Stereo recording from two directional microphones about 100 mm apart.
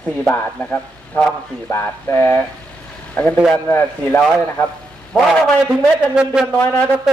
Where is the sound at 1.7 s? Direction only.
25° left (ahead or behind).